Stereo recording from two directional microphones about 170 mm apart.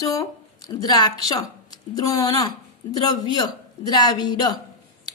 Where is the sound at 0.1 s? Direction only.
20° left (ahead or behind).